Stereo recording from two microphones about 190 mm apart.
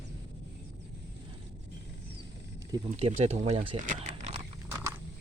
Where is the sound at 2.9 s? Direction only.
35° right (ahead or behind).